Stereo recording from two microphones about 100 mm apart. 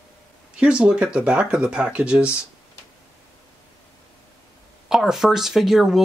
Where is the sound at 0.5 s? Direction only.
10° right (ahead or behind).